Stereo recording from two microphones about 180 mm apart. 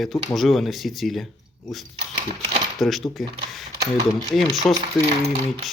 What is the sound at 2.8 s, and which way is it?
Speech, centre (ahead or behind).